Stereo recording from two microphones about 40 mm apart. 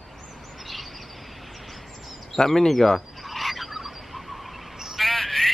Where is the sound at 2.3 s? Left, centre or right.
Centre.